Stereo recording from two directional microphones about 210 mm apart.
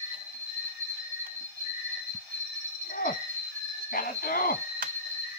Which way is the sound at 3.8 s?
45° left (ahead or behind).